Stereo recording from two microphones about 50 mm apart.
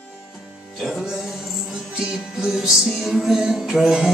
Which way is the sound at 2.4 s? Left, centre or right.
Centre.